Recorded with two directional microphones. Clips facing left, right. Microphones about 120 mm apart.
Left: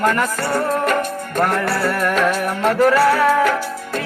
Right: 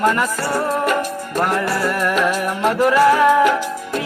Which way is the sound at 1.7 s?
15° right (ahead or behind).